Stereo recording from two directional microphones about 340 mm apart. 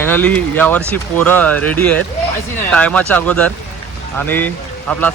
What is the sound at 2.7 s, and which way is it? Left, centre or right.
Speech, centre.